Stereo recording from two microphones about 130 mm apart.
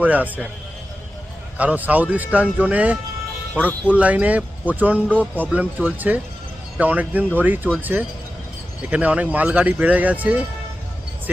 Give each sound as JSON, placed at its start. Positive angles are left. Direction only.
{"t": 0.0, "sound": "speech", "side_deg": -10}
{"t": 1.5, "sound": "speech", "side_deg": -10}